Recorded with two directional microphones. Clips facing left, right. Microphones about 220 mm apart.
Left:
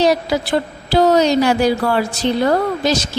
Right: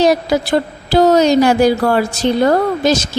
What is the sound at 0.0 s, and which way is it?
Speech, 45° right (ahead or behind).